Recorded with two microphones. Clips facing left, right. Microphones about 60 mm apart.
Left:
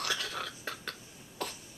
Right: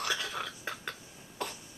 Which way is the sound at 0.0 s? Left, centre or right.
Centre.